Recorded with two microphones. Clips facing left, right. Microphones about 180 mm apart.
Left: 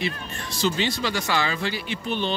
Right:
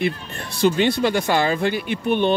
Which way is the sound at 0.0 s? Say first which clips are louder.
Right 6 dB; 55° right (ahead or behind).